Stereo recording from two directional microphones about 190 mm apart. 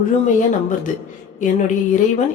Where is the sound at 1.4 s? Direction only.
40° left (ahead or behind).